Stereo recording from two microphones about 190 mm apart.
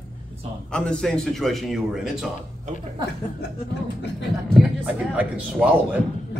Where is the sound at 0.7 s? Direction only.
5° left (ahead or behind).